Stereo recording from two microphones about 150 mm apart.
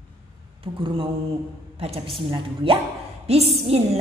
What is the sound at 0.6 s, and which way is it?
A woman's voice, 35° right (ahead or behind).